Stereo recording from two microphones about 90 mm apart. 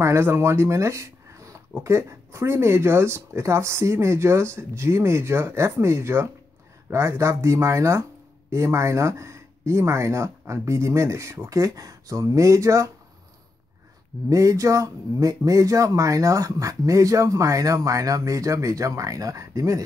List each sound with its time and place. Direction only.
0.0 s speech: 30° right (ahead or behind)
14.3 s speech: 35° right (ahead or behind)